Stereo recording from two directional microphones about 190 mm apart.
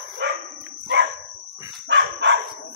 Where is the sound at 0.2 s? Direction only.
70° right (ahead or behind).